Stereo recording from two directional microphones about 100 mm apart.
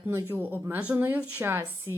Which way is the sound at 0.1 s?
25° right (ahead or behind).